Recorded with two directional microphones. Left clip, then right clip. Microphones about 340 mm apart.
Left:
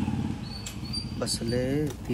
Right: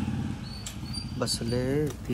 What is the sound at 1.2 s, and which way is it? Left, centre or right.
Speech, centre.